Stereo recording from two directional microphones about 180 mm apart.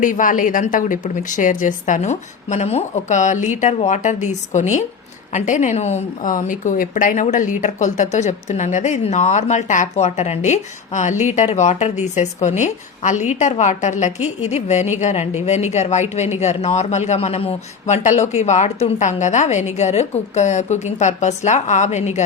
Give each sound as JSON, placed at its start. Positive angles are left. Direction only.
{"t": 0.0, "sound": "a woman's voice", "side_deg": 45}